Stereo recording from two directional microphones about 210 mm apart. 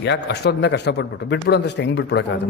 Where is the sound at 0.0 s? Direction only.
55° left (ahead or behind).